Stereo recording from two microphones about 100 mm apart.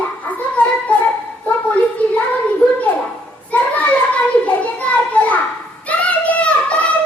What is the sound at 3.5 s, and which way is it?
Children playing, 15° left (ahead or behind).